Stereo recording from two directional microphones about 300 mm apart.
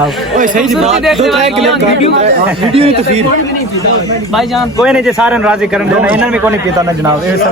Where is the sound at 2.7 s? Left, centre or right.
Centre.